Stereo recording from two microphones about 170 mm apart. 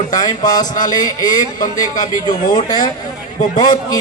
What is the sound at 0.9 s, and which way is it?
A man's voice, 20° left (ahead or behind).